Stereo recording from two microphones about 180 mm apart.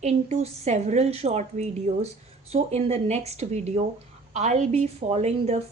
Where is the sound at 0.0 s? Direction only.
40° right (ahead or behind).